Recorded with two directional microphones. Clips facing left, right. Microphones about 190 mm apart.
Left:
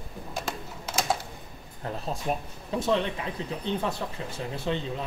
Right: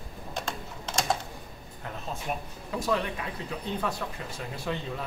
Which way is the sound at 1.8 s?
35° left (ahead or behind).